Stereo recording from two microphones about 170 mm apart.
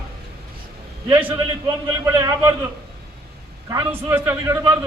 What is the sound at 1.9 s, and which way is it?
Speech, 20° right (ahead or behind).